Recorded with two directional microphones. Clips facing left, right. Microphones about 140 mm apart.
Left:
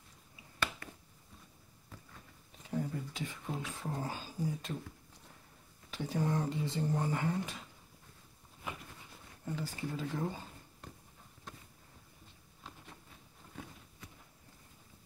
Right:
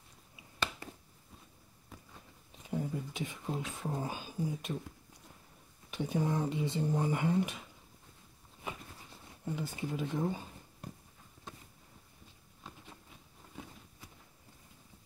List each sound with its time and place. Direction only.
2.7 s speech: 20° right (ahead or behind)
5.9 s speech: 20° right (ahead or behind)
9.4 s speech: 20° right (ahead or behind)